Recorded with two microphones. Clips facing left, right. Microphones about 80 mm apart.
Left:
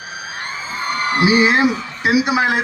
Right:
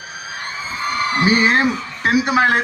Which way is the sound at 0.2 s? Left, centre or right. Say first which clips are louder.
Even; left.